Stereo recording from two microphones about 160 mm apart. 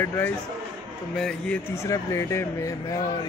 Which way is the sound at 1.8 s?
20° left (ahead or behind).